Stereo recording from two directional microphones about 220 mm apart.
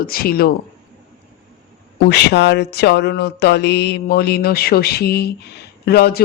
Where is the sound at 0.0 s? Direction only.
40° left (ahead or behind).